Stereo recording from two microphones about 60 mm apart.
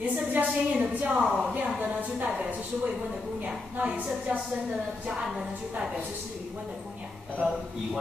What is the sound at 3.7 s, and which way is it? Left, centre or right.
Speech, right.